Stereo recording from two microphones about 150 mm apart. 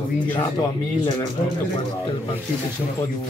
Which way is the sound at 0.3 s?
30° left (ahead or behind).